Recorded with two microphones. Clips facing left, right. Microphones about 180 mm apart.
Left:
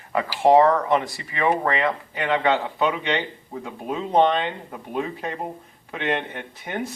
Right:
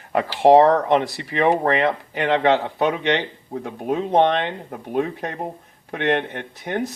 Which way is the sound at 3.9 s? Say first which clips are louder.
Right 2 dB; 55° right (ahead or behind).